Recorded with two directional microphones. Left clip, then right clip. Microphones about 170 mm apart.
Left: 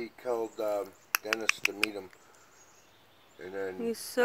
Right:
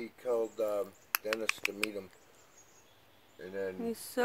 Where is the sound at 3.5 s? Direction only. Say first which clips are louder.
Left 3 dB; 10° left (ahead or behind).